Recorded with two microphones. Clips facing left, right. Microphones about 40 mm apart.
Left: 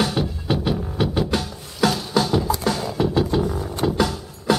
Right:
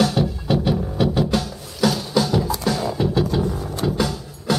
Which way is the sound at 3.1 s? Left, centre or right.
Centre.